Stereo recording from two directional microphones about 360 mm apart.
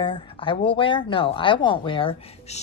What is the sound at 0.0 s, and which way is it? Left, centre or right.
Speech, centre.